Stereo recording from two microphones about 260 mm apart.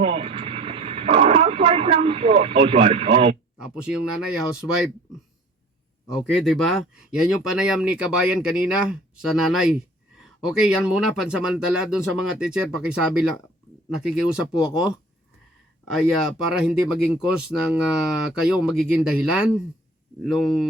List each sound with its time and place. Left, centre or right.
0.0 s radio: right
3.6 s speech: centre
4.6 s speech: centre
6.1 s speech: centre